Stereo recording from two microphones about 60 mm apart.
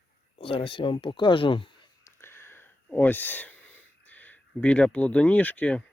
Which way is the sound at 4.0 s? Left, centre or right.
Left.